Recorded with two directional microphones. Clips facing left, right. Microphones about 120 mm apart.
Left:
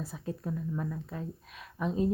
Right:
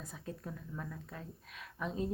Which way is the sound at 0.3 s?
20° left (ahead or behind).